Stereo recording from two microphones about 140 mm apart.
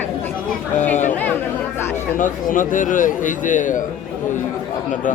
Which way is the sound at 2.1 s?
70° left (ahead or behind).